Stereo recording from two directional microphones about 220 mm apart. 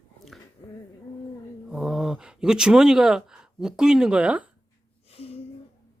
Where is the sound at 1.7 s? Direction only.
Centre (ahead or behind).